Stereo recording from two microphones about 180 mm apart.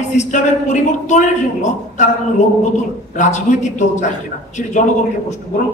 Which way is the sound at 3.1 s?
45° left (ahead or behind).